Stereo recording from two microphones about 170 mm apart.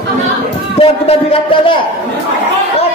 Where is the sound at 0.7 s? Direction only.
35° left (ahead or behind).